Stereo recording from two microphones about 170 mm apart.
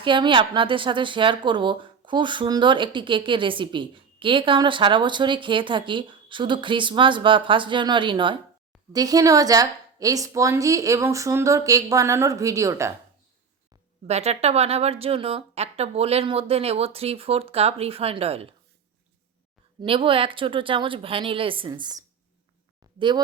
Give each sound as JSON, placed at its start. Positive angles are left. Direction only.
{"t": 0.0, "sound": "speech", "side_deg": -30}
{"t": 14.1, "sound": "speech", "side_deg": -40}
{"t": 19.8, "sound": "speech", "side_deg": -30}